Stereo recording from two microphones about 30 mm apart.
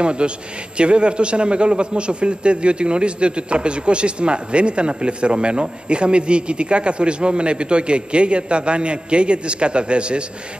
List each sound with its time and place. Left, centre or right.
0.0 s a man's voice: right